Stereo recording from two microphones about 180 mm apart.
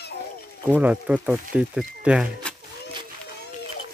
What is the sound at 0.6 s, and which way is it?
Speech, 10° right (ahead or behind).